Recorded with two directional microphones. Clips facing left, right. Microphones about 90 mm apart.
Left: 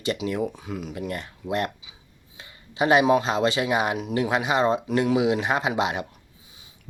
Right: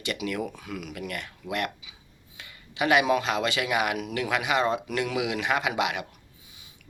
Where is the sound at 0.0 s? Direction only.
30° left (ahead or behind).